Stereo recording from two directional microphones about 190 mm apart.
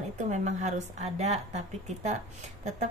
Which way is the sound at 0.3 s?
40° right (ahead or behind).